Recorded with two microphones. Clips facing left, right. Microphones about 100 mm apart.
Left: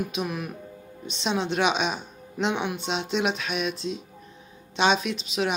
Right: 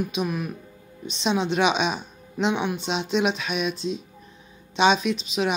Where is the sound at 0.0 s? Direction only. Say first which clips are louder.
Right 3 dB; centre (ahead or behind).